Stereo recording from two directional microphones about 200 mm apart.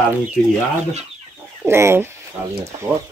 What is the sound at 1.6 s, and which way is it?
Speech, 10° right (ahead or behind).